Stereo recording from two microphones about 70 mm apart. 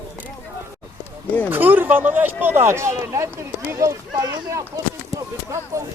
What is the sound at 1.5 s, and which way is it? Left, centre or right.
Speech, right.